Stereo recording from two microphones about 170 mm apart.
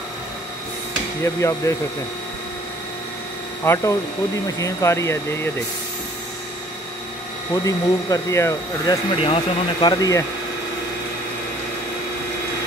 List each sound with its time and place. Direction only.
1.2 s speech: 15° left (ahead or behind)
3.6 s speech: 15° left (ahead or behind)
7.6 s speech: 20° left (ahead or behind)
9.2 s speech: 30° left (ahead or behind)